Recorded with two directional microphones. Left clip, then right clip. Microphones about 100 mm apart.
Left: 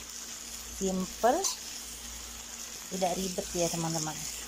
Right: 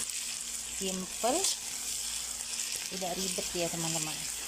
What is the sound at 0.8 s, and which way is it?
Frying, 15° right (ahead or behind).